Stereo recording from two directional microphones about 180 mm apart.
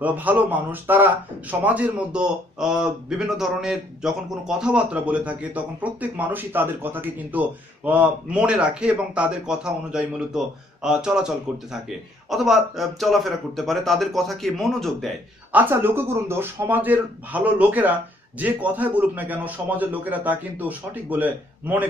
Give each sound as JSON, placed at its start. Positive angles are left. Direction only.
{"t": 0.0, "sound": "speech", "side_deg": -10}
{"t": 15.5, "sound": "a man's voice", "side_deg": -10}